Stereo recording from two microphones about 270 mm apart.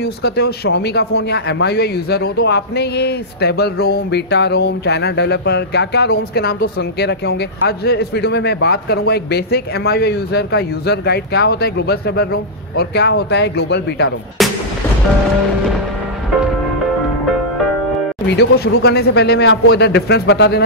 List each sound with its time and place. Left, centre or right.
0.0 s a man's voice: left
14.4 s artillery fire: centre
18.3 s a man's voice: left